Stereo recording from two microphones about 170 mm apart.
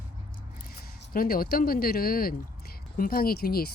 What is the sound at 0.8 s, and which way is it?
Speech, 60° left (ahead or behind).